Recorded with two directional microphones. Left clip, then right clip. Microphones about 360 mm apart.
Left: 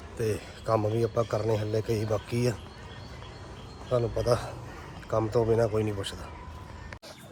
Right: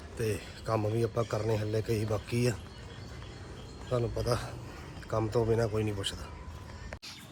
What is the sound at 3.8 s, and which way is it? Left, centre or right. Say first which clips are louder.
Speech: left 6 dB; centre.